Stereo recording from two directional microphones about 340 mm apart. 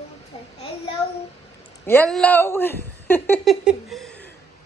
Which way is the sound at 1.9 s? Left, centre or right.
Centre.